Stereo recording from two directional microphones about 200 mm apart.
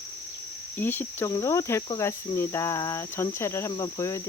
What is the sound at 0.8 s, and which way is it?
Cricket, 10° left (ahead or behind).